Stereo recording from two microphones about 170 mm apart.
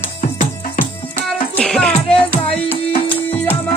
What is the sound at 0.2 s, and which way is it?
Music, 55° left (ahead or behind).